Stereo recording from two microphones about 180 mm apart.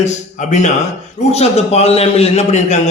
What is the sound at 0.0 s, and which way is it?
A man's voice, 40° left (ahead or behind).